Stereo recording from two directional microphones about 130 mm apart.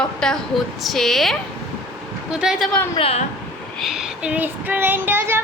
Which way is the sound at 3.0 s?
50° left (ahead or behind).